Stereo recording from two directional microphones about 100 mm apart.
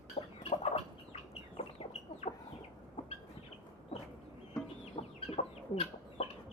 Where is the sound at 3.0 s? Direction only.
55° left (ahead or behind).